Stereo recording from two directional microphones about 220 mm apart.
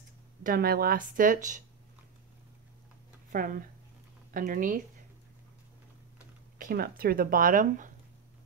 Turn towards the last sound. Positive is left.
turn(degrees=-35)  # may be behind; listen again after turning